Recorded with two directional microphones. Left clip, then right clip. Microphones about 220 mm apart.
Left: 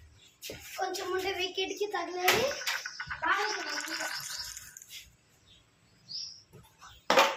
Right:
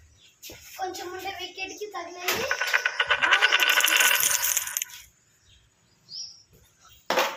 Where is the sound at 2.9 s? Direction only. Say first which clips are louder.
Right 10 dB; 45° right (ahead or behind).